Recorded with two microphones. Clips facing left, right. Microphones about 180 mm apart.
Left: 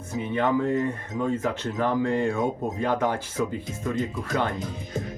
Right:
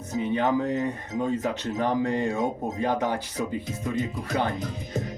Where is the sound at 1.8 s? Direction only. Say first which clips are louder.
Left 1 dB; 20° right (ahead or behind).